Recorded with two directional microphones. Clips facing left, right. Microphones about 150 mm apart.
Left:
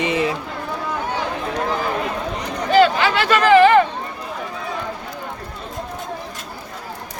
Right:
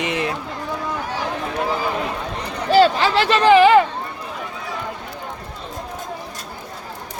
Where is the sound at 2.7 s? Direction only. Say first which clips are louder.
Even; 35° right (ahead or behind).